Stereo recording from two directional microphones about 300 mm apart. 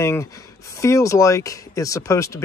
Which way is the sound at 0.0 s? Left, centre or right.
Centre.